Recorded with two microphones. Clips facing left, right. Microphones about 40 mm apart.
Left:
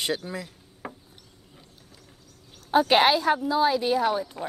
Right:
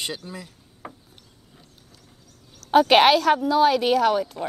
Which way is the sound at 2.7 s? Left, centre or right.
Right.